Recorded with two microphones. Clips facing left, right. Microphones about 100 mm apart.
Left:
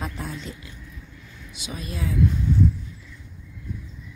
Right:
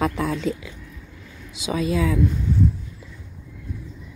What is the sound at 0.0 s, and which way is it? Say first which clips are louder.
Speech: right 10 dB; 90° right.